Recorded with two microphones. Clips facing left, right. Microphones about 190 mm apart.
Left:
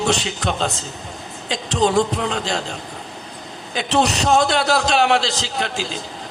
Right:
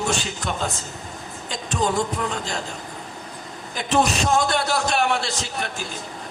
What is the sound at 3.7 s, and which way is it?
A man's voice, 75° left (ahead or behind).